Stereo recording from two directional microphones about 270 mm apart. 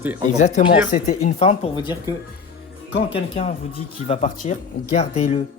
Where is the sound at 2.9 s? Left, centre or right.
Left.